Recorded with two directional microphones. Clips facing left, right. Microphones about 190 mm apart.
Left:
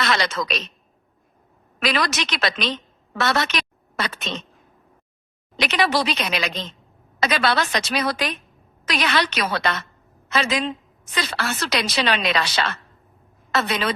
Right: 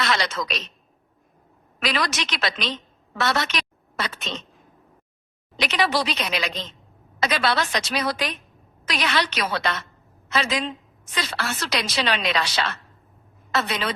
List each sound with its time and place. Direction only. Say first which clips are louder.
0.0 s a woman's voice: left 2 dB; 65° left (ahead or behind)
1.8 s a woman's voice: left 3 dB; 60° left (ahead or behind); by 4.3 s 80° left
5.6 s a woman's voice: left 2 dB; 65° left (ahead or behind)
7.2 s a woman's voice: left 2 dB; 55° left (ahead or behind)